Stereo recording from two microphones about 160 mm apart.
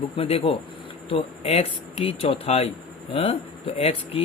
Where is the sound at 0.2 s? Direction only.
35° left (ahead or behind).